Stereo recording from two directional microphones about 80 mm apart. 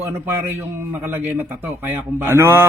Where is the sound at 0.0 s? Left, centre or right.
Right.